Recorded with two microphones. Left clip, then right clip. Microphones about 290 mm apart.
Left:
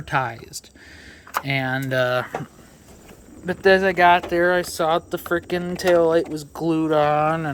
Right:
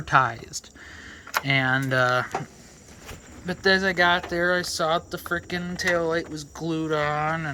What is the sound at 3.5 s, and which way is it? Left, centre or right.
Speech, centre.